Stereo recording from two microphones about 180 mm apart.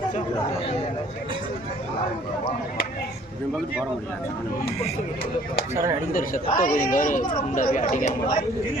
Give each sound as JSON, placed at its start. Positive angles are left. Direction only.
{"t": 5.7, "sound": "speech", "side_deg": -15}
{"t": 6.1, "sound": "speech", "side_deg": 50}